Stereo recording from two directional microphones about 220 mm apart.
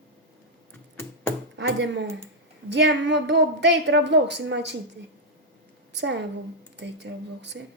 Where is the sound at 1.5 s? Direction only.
50° right (ahead or behind).